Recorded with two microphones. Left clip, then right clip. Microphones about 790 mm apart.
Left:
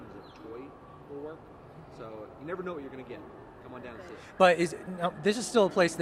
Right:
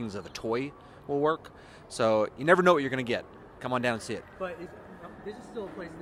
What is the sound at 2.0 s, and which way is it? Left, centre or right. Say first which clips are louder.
Speech: right 19 dB; right.